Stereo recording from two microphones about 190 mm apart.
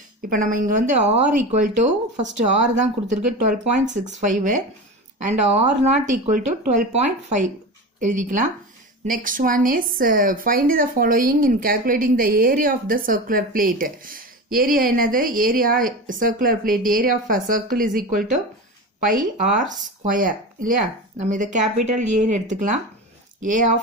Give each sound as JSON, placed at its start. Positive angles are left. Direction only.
{"t": 0.2, "sound": "speech", "side_deg": -45}